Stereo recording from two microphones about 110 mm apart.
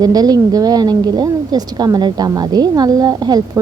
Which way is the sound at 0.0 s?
35° right (ahead or behind).